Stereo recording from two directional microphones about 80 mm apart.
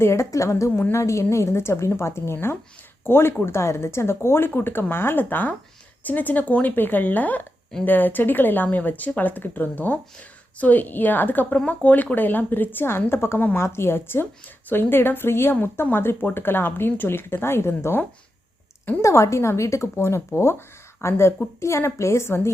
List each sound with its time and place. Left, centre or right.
0.0 s a woman's voice: left
19.0 s a woman's voice: left